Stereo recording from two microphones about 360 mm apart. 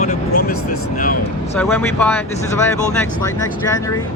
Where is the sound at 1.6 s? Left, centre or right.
Centre.